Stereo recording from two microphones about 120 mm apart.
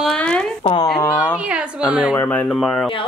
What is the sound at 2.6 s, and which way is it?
Speech, 5° left (ahead or behind).